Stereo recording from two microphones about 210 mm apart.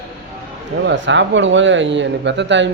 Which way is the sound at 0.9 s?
60° right (ahead or behind).